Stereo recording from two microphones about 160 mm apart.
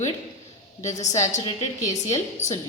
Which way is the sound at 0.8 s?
45° left (ahead or behind).